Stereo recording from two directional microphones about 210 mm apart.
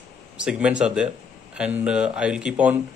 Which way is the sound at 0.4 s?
5° right (ahead or behind).